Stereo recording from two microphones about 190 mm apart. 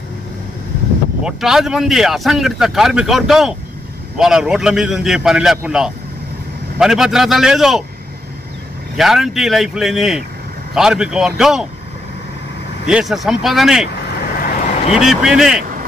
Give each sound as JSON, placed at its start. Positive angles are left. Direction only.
{"t": 1.2, "sound": "speech", "side_deg": 0}
{"t": 8.9, "sound": "speech", "side_deg": 0}
{"t": 12.8, "sound": "speech", "side_deg": -5}
{"t": 14.2, "sound": "vehicle", "side_deg": 50}
{"t": 15.0, "sound": "speech", "side_deg": -5}